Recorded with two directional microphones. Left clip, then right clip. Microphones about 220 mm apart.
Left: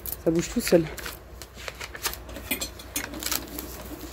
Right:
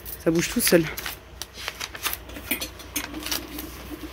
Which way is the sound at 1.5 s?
40° right (ahead or behind).